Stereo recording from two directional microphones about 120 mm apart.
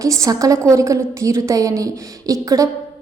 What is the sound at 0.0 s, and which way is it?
A woman's voice, 30° right (ahead or behind).